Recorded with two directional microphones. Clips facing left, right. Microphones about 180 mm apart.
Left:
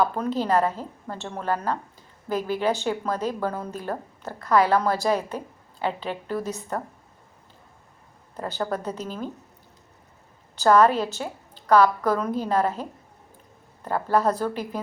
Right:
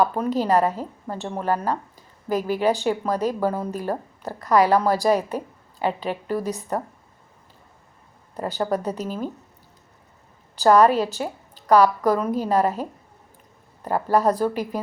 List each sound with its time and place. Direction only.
0.0 s a woman's voice: 10° right (ahead or behind)
8.5 s a woman's voice: 15° right (ahead or behind)
8.8 s a woman's voice: 40° right (ahead or behind)
9.0 s a woman's voice: 10° right (ahead or behind)
10.6 s a woman's voice: 10° right (ahead or behind)
13.8 s a woman's voice: 10° right (ahead or behind)